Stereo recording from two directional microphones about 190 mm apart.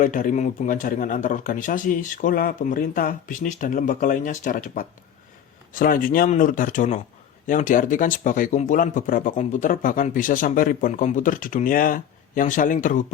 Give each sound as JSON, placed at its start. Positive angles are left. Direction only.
{"t": 0.0, "sound": "speech", "side_deg": 45}